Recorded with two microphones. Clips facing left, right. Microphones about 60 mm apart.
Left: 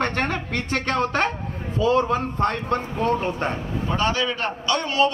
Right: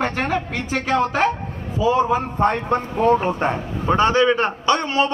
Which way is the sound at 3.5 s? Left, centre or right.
Right.